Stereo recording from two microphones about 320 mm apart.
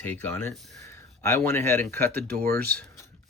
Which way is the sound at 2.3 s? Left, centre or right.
Right.